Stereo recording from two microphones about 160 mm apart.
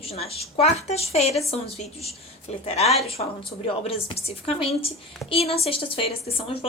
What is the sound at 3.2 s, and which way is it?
A woman's voice, 45° left (ahead or behind).